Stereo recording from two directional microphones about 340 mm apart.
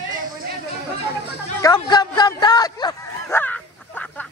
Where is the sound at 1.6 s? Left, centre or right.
Centre.